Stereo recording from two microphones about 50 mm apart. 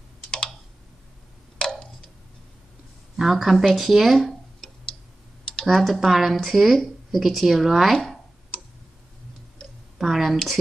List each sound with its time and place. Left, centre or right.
1.6 s tick-tock: centre
3.2 s speech: centre
9.9 s a sound: centre